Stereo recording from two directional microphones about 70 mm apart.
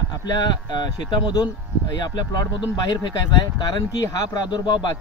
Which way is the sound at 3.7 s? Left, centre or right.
Left.